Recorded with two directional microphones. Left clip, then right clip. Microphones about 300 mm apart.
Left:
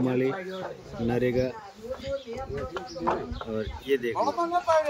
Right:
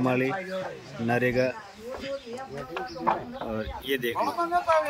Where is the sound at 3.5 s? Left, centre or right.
Centre.